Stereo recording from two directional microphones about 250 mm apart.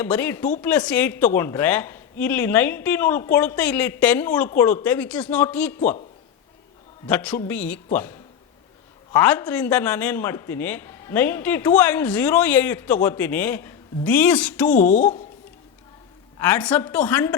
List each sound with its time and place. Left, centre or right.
0.0 s a man's voice: centre
7.1 s a man's voice: centre
9.1 s a man's voice: centre
14.8 s a woman's voice: left
16.4 s a man's voice: centre